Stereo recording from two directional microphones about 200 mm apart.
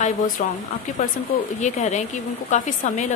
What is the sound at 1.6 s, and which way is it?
Speech, 35° left (ahead or behind).